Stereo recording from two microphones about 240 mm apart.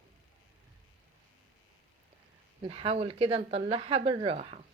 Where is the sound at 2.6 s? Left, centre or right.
Right.